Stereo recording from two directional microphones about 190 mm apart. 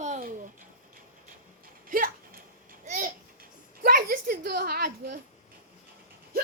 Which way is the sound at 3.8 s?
50° right (ahead or behind).